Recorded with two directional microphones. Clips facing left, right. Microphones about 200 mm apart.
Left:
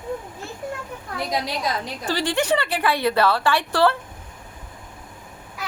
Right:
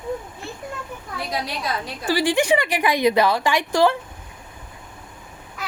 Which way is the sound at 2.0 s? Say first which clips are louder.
Right 4 dB; 10° right (ahead or behind).